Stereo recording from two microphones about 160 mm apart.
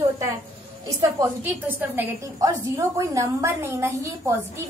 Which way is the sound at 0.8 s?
20° right (ahead or behind).